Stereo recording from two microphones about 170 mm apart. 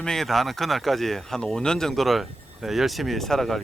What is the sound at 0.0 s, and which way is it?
Speech, 5° left (ahead or behind).